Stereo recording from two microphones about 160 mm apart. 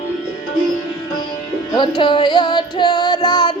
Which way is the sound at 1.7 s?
30° left (ahead or behind).